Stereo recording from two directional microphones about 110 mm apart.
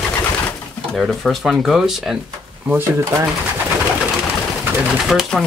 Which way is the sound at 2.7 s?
20° right (ahead or behind).